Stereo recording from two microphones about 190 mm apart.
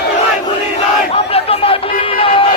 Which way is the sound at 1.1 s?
30° left (ahead or behind).